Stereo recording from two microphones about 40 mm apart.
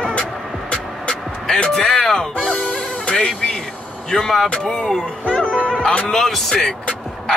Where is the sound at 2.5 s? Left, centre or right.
Left.